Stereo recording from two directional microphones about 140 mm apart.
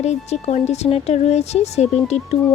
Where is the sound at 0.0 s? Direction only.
50° left (ahead or behind).